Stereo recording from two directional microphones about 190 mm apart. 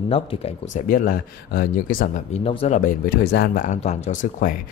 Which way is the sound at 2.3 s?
30° left (ahead or behind).